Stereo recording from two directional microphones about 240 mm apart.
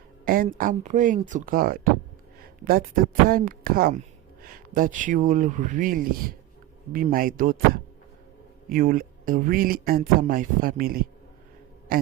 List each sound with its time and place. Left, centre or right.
0.3 s speech: right